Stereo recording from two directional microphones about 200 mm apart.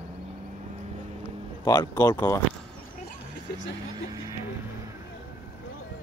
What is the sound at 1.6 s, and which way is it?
Speech, 20° left (ahead or behind).